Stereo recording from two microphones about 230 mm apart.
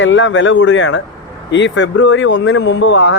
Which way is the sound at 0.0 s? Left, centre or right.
Left.